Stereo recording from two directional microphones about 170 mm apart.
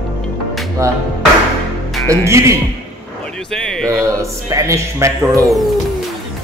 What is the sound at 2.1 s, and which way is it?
Music, 15° right (ahead or behind).